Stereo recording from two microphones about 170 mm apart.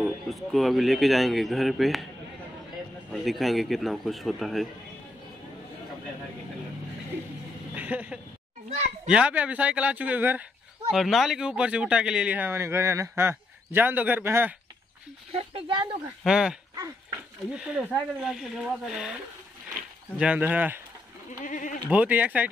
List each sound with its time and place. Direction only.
0.0 s speech: centre (ahead or behind)
3.1 s speech: centre (ahead or behind)
7.7 s a sound: 10° right (ahead or behind)
8.6 s children playing: 40° right (ahead or behind)
9.1 s speech: 5° right (ahead or behind)
15.3 s speech: 35° right (ahead or behind)
16.3 s speech: 5° right (ahead or behind)
20.2 s speech: 10° right (ahead or behind)
21.5 s speech: 50° left (ahead or behind)
21.8 s speech: 10° right (ahead or behind)